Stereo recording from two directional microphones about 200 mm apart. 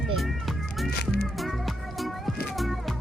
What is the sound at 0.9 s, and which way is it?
Music, 50° left (ahead or behind).